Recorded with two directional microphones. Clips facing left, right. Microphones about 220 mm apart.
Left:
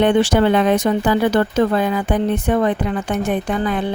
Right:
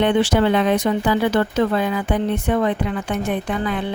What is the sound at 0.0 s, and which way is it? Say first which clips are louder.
Speech: left 2 dB; 45° left (ahead or behind).